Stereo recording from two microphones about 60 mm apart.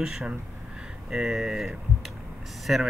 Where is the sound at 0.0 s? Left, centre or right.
Centre.